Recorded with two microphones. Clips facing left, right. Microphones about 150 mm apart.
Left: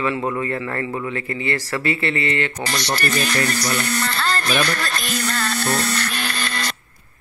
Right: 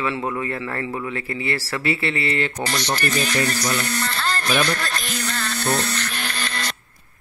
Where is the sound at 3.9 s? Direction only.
80° left.